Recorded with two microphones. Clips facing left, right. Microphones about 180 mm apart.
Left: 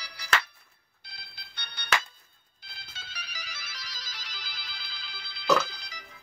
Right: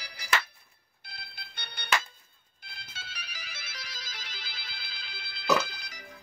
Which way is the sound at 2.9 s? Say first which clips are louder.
Left 1 dB; 50° right (ahead or behind).